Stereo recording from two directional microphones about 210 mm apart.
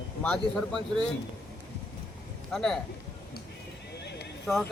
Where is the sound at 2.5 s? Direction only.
Centre (ahead or behind).